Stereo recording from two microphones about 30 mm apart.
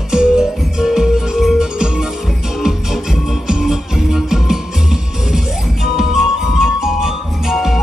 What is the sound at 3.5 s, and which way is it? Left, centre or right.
Music, centre.